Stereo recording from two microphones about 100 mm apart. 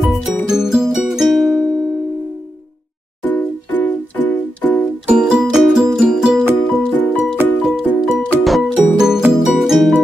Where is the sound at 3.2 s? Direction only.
15° left (ahead or behind).